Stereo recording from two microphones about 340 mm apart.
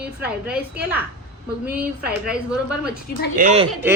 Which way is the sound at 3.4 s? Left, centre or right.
Centre.